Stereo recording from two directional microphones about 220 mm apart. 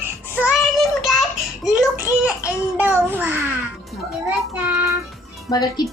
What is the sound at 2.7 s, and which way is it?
Speech, 10° right (ahead or behind).